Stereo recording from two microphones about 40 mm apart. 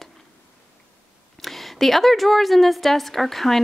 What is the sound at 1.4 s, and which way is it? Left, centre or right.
A woman's voice, centre.